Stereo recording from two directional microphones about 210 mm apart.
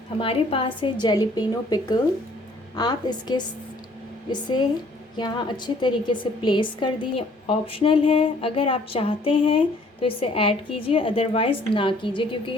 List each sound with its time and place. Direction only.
0.2 s a woman's voice: 25° left (ahead or behind)
5.1 s a woman's voice: 20° left (ahead or behind)